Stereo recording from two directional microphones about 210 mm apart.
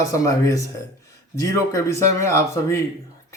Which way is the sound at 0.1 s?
15° left (ahead or behind).